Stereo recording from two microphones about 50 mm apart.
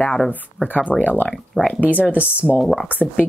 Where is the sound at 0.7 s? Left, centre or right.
Left.